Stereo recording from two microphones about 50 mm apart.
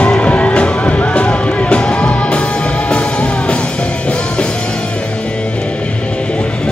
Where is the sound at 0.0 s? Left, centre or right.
Left.